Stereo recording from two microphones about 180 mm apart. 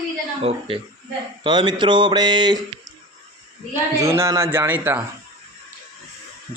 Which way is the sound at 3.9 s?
15° right (ahead or behind).